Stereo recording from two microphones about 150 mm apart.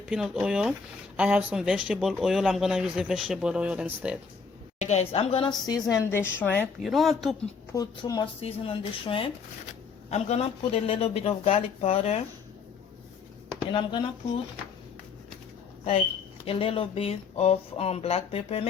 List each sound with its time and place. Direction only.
0.0 s speech: 5° right (ahead or behind)
4.8 s speech: 45° left (ahead or behind); by 5.8 s 25° left (ahead or behind)
6.0 s a woman's voice: 15° left (ahead or behind)
6.8 s speech: centre (ahead or behind)
7.7 s a woman's voice: 25° left (ahead or behind)
8.4 s speech: 40° left (ahead or behind)
13.7 s speech: 30° left (ahead or behind)
16.5 s speech: 35° left (ahead or behind)